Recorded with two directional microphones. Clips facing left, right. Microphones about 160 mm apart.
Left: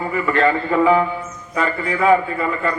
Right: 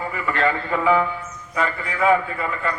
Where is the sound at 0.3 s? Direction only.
35° left (ahead or behind).